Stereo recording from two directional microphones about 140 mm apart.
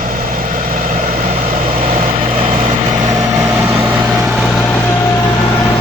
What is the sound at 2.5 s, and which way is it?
Vehicle, 70° right (ahead or behind).